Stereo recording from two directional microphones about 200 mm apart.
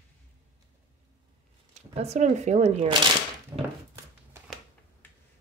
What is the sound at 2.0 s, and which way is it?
Speech, 35° right (ahead or behind).